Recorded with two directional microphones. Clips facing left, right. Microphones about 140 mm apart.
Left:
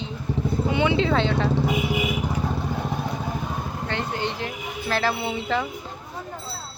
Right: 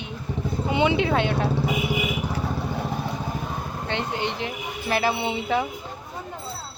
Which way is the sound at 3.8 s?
20° right (ahead or behind).